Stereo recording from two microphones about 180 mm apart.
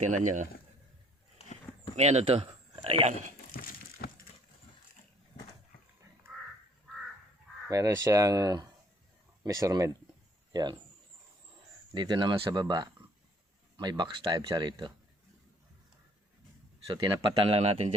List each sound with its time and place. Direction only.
0.0 s speech: 45° right (ahead or behind)
1.4 s a sound: 35° left (ahead or behind)
2.0 s speech: 35° right (ahead or behind)
3.5 s a sound: 55° left (ahead or behind)
7.7 s speech: 20° right (ahead or behind)
11.9 s speech: 25° right (ahead or behind)
16.8 s speech: 20° right (ahead or behind)